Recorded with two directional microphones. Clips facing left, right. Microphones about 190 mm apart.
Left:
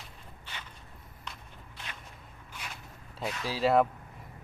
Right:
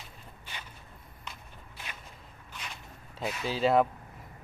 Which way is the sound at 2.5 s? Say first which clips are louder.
Even; 10° left (ahead or behind).